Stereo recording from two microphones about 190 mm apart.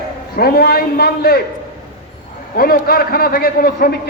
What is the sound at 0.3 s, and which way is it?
A man's voice, 55° left (ahead or behind).